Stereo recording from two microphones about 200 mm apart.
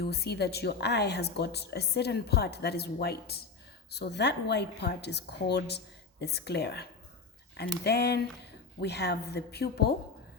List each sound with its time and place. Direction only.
0.0 s speech: 55° left (ahead or behind)